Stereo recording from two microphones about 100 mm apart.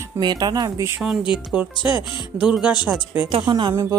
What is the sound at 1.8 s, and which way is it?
Speech, 50° left (ahead or behind).